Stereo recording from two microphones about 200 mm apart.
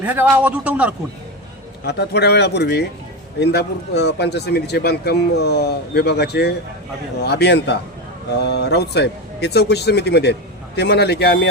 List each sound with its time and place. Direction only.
0.0 s speech: 10° right (ahead or behind)
1.9 s speech: 55° left (ahead or behind)